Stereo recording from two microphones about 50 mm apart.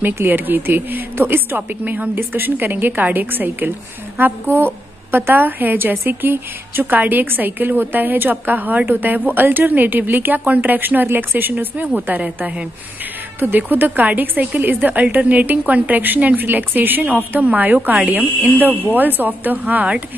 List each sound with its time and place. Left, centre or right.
0.0 s a woman's voice: right
12.1 s a woman's voice: right
13.4 s a woman's voice: right